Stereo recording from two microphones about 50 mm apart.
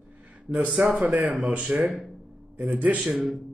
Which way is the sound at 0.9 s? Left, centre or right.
Right.